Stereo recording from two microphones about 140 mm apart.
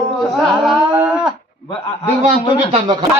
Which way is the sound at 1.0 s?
10° right (ahead or behind).